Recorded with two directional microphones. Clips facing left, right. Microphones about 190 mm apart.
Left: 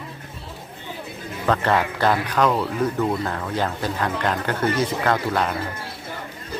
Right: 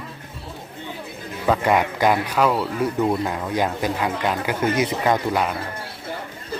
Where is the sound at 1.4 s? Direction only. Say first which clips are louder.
Right 2 dB; 10° right (ahead or behind).